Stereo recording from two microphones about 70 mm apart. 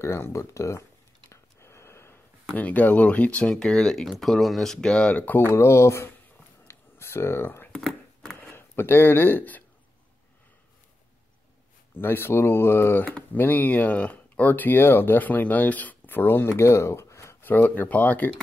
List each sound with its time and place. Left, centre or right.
0.0 s speech: left
1.3 s a sound: left
2.5 s speech: left
5.5 s speech: left
6.7 s a sound: left
7.7 s a sound: centre
8.4 s speech: left
12.0 s speech: left
13.0 s speech: left
17.4 s speech: left